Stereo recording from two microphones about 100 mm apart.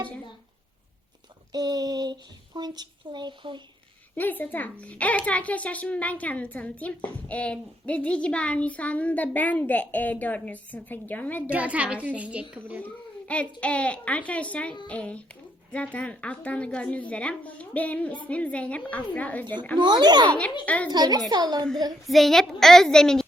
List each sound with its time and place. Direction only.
1.5 s speech: 40° right (ahead or behind)
4.1 s a woman's voice: 20° left (ahead or behind)
11.4 s a child's voice: 15° right (ahead or behind)
12.8 s a woman's voice: 10° left (ahead or behind)
19.8 s speech: 45° right (ahead or behind)
20.7 s a woman's voice: 15° left (ahead or behind)
20.9 s speech: 45° right (ahead or behind)
22.0 s a woman's voice: centre (ahead or behind)